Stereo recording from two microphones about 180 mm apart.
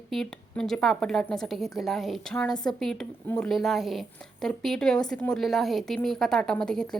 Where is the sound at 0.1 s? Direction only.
Centre (ahead or behind).